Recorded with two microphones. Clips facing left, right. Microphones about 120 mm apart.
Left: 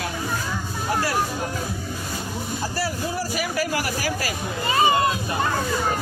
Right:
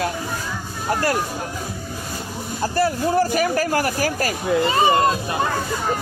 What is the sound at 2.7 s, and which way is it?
Speech, 50° right (ahead or behind).